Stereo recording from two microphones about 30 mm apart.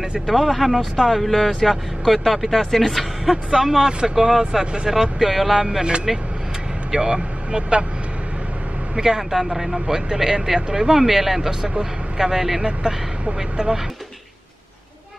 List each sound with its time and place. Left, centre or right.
0.4 s speech: centre
3.5 s speech: centre
5.3 s speech: centre
5.6 s speech: centre
6.1 s speech: centre
6.9 s speech: centre
9.0 s speech: centre
12.8 s speech: right